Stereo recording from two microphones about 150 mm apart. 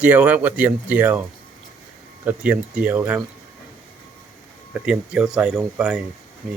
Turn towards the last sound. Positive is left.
turn(degrees=0)  # may be behind; listen again after turning